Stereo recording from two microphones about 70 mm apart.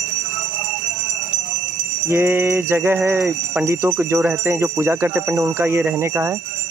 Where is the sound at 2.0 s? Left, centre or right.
Right.